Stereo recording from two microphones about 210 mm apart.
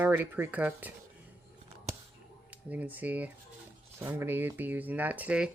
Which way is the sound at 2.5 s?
10° right (ahead or behind).